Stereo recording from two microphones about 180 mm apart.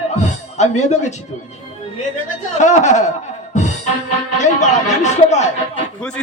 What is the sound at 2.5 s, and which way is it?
Speech, 40° left (ahead or behind).